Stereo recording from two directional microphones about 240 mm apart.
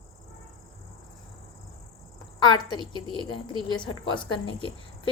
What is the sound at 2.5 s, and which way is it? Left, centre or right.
Speech, centre.